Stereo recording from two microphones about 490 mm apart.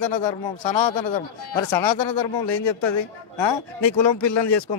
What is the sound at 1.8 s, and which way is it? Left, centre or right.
A man's voice, left.